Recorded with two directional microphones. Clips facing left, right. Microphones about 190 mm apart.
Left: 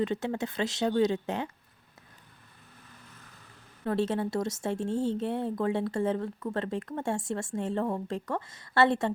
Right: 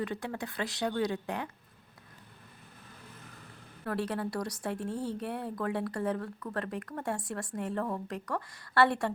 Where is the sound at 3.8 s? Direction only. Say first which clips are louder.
Left 5 dB; 25° left (ahead or behind).